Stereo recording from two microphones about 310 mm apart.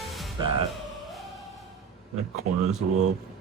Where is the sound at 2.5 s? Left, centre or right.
Right.